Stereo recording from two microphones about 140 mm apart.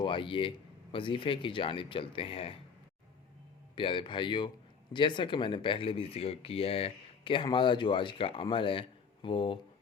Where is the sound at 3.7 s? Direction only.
35° left (ahead or behind).